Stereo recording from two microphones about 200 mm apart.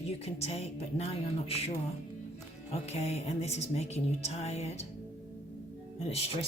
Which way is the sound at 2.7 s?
35° left (ahead or behind).